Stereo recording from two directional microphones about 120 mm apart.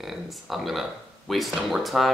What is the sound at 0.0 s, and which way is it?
Speech, centre (ahead or behind).